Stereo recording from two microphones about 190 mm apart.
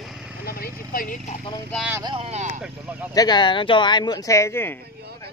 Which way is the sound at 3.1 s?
20° left (ahead or behind).